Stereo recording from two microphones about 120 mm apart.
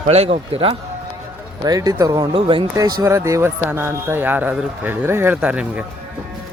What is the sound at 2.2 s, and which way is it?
Speech, 45° right (ahead or behind).